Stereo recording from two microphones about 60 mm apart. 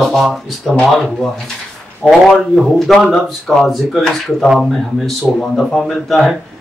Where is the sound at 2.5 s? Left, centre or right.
Centre.